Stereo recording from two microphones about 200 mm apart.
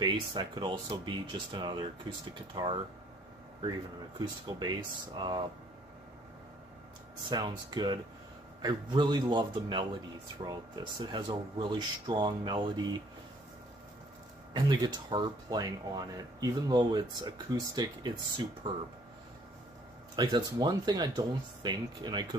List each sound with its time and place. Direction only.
0.0 s speech: 20° right (ahead or behind)
4.2 s speech: 20° right (ahead or behind)
7.2 s speech: 20° right (ahead or behind)
14.5 s speech: 25° right (ahead or behind)
20.2 s speech: 20° right (ahead or behind)